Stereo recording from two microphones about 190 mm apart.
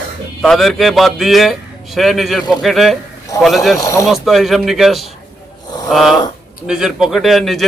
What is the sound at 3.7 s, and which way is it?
Speech, 15° left (ahead or behind).